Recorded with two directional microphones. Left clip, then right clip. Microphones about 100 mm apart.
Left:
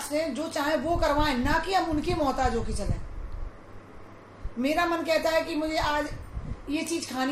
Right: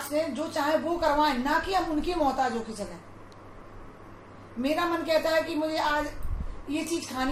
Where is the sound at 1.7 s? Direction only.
90° left.